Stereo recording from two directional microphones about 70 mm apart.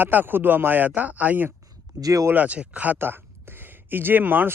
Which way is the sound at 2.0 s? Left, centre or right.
Right.